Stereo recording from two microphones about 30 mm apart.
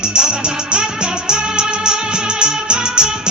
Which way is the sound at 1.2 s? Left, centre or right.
Right.